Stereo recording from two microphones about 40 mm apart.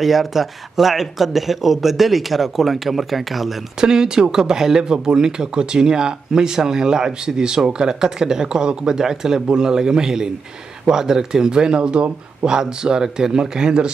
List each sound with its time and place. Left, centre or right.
0.0 s speech: centre
3.8 s speech: centre